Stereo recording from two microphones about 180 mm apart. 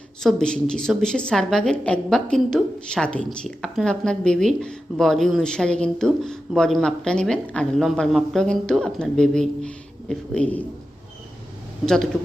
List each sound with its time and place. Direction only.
0.2 s a woman's voice: 5° left (ahead or behind)